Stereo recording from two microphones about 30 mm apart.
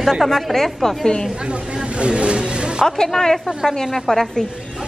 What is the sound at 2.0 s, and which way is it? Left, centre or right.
Speech, right.